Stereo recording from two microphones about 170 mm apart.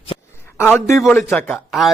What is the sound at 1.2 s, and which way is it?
Speech, centre (ahead or behind).